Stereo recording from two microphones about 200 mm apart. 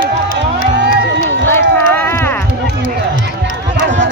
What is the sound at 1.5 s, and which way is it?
Run, 10° left (ahead or behind).